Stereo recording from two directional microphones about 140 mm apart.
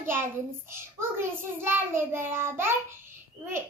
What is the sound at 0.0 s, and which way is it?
A child's voice, 15° right (ahead or behind).